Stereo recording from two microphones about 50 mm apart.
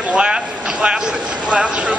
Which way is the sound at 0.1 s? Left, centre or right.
Centre.